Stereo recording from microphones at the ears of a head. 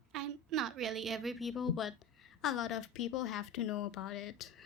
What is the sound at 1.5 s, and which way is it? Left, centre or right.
A woman's voice, left.